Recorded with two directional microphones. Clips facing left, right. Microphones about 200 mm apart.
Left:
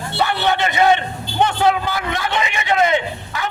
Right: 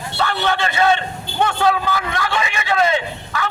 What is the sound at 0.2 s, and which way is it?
Speech, 20° left (ahead or behind).